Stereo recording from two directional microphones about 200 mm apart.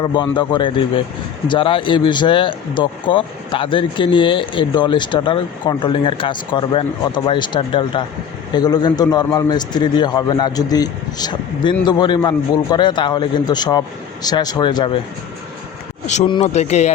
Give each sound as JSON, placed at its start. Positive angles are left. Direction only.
{"t": 0.0, "sound": "speech", "side_deg": 25}
{"t": 16.2, "sound": "speech", "side_deg": 30}